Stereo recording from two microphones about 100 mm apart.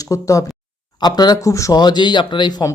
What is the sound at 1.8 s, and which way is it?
Speech, 50° left (ahead or behind).